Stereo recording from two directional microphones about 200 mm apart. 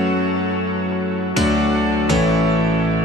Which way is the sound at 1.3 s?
Centre (ahead or behind).